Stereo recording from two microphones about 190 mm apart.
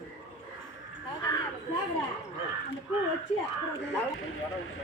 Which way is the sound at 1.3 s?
20° left (ahead or behind).